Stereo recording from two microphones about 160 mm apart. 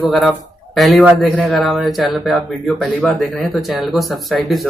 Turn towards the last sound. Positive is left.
turn(degrees=0)  # may be behind; listen again after turning